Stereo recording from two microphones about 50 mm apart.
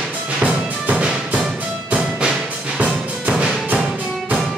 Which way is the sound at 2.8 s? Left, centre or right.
Right.